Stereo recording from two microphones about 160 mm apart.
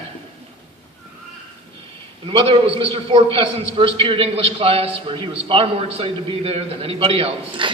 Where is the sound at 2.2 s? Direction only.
35° right (ahead or behind).